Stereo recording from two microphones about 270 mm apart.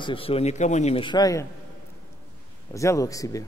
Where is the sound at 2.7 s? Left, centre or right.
Centre.